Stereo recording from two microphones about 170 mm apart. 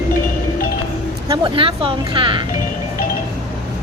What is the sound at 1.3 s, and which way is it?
Speech, 30° right (ahead or behind).